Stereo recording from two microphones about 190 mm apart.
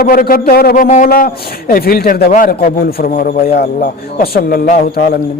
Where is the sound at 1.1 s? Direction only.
50° left (ahead or behind).